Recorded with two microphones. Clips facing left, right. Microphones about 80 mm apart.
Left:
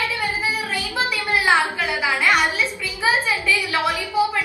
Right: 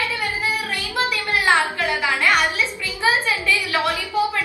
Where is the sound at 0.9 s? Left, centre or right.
Centre.